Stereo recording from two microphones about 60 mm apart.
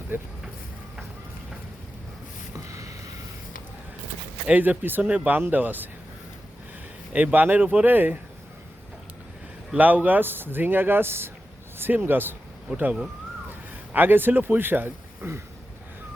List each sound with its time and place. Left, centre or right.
0.1 s speech: right
2.6 s a sound: right
4.4 s speech: right
7.1 s speech: right
9.7 s speech: right